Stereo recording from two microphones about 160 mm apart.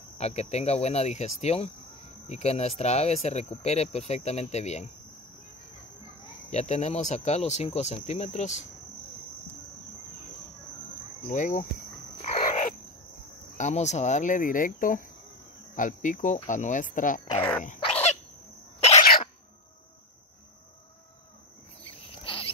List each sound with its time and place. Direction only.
0.2 s speech: 40° left (ahead or behind)
6.5 s speech: 45° left (ahead or behind)
11.2 s speech: 50° left (ahead or behind)
12.2 s frog: 50° left (ahead or behind)
13.6 s speech: 45° left (ahead or behind)
17.4 s dog: 10° left (ahead or behind)
17.7 s bird: 40° left (ahead or behind)
21.8 s a sound: 35° left (ahead or behind)